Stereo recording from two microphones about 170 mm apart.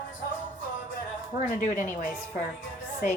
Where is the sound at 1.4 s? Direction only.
50° left (ahead or behind).